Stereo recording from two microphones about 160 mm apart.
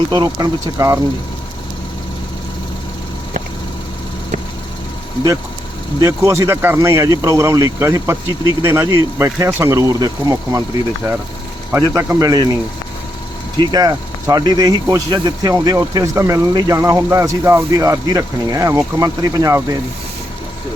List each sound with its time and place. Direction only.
0.1 s speech: 20° right (ahead or behind)
6.0 s speech: 15° right (ahead or behind)
11.7 s speech: 15° right (ahead or behind)
13.6 s speech: 25° right (ahead or behind)